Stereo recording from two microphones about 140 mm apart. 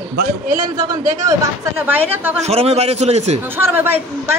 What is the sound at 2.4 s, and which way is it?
A man's voice, 50° right (ahead or behind).